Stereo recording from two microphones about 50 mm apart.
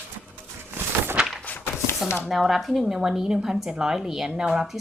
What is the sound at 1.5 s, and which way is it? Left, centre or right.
Chopping, left.